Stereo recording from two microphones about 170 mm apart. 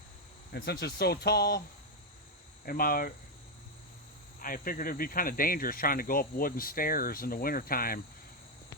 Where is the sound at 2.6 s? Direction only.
60° left (ahead or behind).